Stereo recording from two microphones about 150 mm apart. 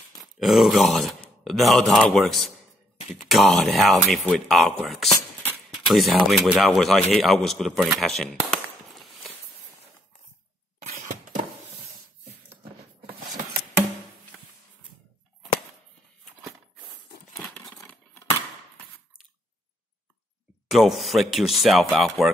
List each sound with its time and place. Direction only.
0.2 s groan: centre (ahead or behind)
1.4 s a man's voice: centre (ahead or behind)
8.0 s a sound: centre (ahead or behind)
10.9 s a sound: 55° right (ahead or behind)
17.3 s crumpling: 5° left (ahead or behind)
20.6 s a man's voice: centre (ahead or behind)